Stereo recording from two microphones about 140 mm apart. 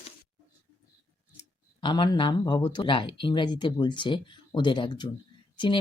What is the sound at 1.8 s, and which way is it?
Speech, 35° left (ahead or behind).